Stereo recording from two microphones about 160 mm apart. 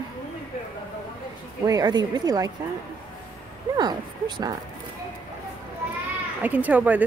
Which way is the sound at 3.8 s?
25° right (ahead or behind).